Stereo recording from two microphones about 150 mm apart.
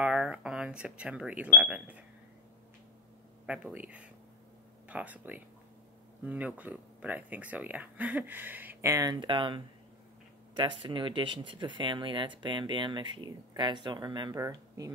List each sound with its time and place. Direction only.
0.0 s speech: 5° right (ahead or behind)
3.4 s speech: 5° right (ahead or behind)